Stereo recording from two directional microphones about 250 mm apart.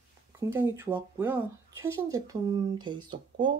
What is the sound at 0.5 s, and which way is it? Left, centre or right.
Speech, centre.